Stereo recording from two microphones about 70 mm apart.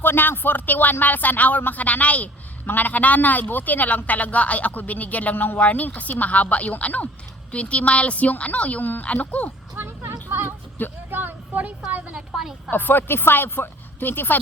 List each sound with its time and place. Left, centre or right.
0.0 s speech: left
9.7 s a sound: right
11.1 s vehicle: right
11.9 s a woman's voice: right
12.3 s a woman's voice: centre
12.7 s speech: left